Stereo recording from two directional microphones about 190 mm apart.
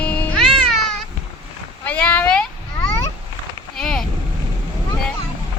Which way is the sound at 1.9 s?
10° left (ahead or behind).